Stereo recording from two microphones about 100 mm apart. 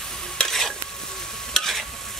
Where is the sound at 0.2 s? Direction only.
5° left (ahead or behind).